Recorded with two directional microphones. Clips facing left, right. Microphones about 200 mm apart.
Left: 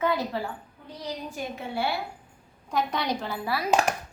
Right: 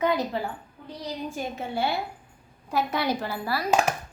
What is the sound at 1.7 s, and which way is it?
Speech, 20° right (ahead or behind).